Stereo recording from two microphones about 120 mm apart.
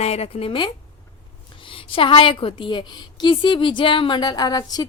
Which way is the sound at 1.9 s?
45° left (ahead or behind).